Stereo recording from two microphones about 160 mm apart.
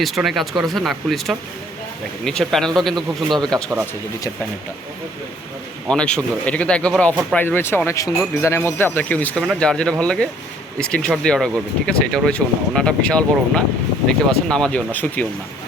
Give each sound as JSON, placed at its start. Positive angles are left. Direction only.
{"t": 0.0, "sound": "speech", "side_deg": 0}
{"t": 5.9, "sound": "speech", "side_deg": 5}